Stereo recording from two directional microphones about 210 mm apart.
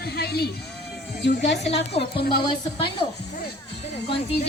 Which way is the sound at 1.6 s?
30° left (ahead or behind).